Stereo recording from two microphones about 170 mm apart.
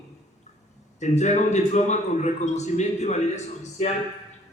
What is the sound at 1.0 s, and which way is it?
A man's voice, 45° left (ahead or behind).